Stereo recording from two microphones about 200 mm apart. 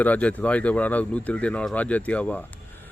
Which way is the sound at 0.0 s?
5° left (ahead or behind).